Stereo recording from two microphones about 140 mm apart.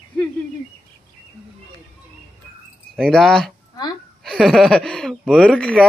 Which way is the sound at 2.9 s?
5° left (ahead or behind).